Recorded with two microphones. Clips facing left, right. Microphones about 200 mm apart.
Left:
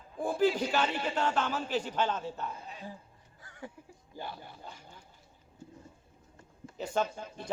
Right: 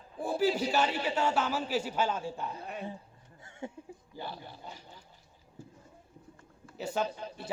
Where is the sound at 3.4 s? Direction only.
25° right (ahead or behind).